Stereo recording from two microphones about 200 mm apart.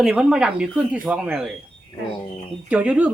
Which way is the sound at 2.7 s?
5° right (ahead or behind).